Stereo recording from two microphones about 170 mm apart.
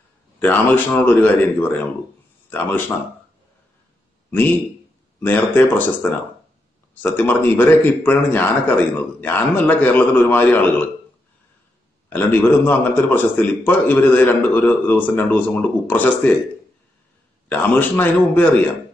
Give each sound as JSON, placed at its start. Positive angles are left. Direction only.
{"t": 0.4, "sound": "a man's voice", "side_deg": 10}
{"t": 5.2, "sound": "a man's voice", "side_deg": 10}
{"t": 7.0, "sound": "a man's voice", "side_deg": 10}
{"t": 12.1, "sound": "a man's voice", "side_deg": 10}
{"t": 17.5, "sound": "a man's voice", "side_deg": 10}